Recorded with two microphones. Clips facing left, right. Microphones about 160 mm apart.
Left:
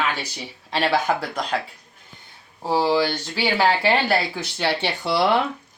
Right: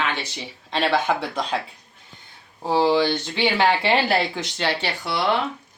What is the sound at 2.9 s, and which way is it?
Speech, 10° left (ahead or behind).